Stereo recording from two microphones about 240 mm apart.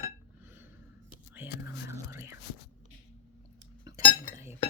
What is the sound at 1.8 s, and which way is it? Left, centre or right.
Whispering, centre.